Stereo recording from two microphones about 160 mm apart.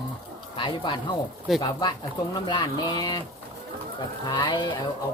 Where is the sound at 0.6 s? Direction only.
30° left (ahead or behind).